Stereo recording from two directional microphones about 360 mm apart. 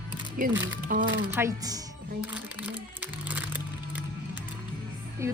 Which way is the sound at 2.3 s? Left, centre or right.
Centre.